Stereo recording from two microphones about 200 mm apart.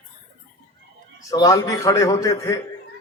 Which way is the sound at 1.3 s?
20° left (ahead or behind).